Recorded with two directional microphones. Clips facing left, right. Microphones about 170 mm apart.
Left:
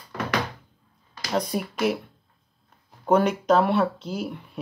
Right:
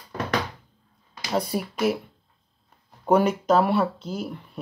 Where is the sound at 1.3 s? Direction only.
5° right (ahead or behind).